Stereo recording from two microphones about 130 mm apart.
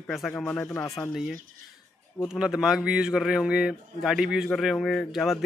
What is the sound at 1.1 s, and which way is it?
A man's voice, 5° right (ahead or behind).